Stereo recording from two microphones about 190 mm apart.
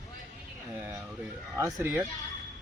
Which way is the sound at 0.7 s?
10° right (ahead or behind).